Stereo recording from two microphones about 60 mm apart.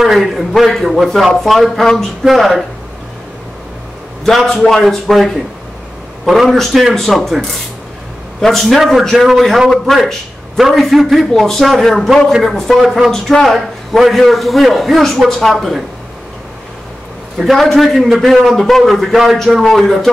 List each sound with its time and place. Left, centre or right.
0.0 s a man's voice: centre
4.5 s a man's voice: centre
17.4 s a man's voice: centre